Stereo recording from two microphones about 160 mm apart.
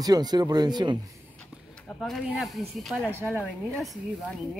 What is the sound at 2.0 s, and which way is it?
Speech, centre (ahead or behind).